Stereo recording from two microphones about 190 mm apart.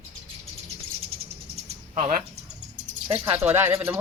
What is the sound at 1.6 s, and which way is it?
Bird, 35° right (ahead or behind).